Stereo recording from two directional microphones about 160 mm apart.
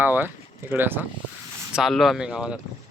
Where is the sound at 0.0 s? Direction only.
10° right (ahead or behind).